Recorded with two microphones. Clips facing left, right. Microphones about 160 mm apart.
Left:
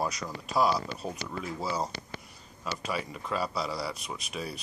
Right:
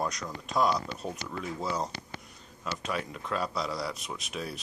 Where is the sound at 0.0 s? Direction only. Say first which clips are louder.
Left 1 dB; 5° left (ahead or behind).